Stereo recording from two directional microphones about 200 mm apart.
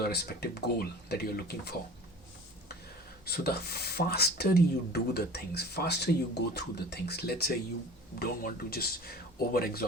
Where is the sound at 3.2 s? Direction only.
50° left (ahead or behind).